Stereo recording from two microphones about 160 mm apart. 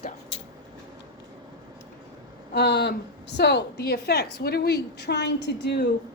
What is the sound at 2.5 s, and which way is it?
A woman's voice, 90° left.